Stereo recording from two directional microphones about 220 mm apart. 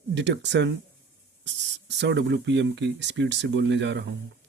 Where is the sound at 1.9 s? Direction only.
55° right (ahead or behind).